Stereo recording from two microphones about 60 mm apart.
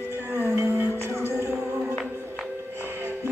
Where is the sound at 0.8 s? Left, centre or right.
Right.